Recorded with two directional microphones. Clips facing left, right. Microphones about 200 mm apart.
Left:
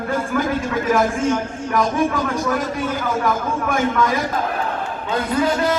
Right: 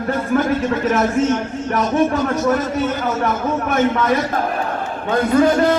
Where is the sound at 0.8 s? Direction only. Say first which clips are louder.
Left 1 dB; 10° left (ahead or behind).